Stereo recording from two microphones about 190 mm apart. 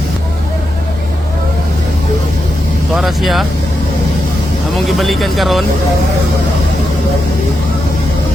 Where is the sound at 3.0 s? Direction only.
Centre (ahead or behind).